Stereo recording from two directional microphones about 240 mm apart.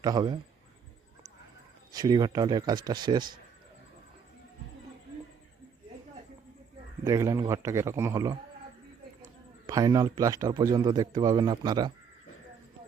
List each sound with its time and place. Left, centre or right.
0.0 s speech: centre
1.9 s speech: centre
7.0 s speech: centre
9.6 s speech: centre